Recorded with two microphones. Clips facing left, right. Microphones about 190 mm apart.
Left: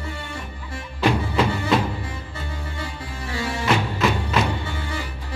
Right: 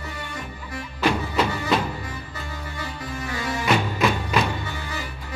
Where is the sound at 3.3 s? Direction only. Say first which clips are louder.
Left 2 dB; 30° left (ahead or behind).